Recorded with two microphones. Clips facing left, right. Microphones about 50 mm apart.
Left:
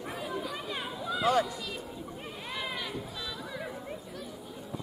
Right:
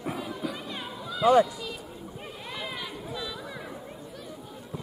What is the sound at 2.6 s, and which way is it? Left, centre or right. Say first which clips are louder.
Run: left 1 dB; centre.